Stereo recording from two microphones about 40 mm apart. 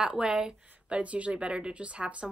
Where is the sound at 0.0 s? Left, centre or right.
Right.